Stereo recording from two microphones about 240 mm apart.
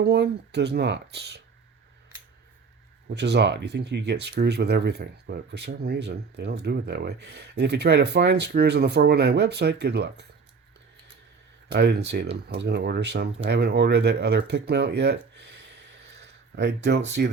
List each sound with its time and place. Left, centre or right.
0.0 s speech: right
3.1 s speech: right
11.7 s speech: right
14.7 s a sound: right
17.1 s speech: right